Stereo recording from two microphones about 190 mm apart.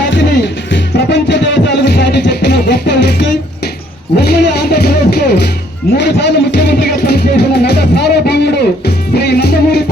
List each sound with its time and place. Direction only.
0.1 s music: 70° left (ahead or behind)